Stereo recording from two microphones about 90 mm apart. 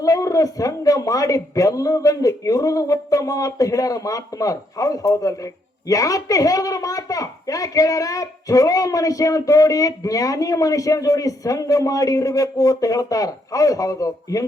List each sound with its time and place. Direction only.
0.0 s a child's voice: 40° left (ahead or behind)